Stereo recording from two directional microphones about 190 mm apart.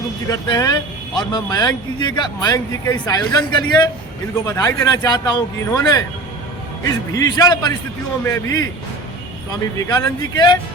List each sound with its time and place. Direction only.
0.3 s speech: 20° left (ahead or behind)
7.1 s a man's voice: 20° left (ahead or behind)